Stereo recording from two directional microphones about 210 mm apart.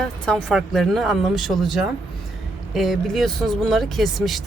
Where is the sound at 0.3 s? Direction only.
Centre (ahead or behind).